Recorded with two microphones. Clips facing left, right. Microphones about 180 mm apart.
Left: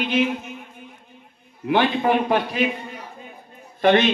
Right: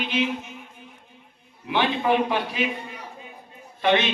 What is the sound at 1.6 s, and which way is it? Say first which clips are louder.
A man's voice: left 3 dB; 50° left (ahead or behind).